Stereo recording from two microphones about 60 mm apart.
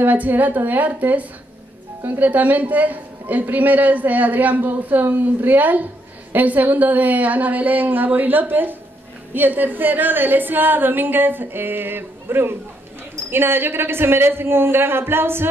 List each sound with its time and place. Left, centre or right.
0.0 s a woman's voice: right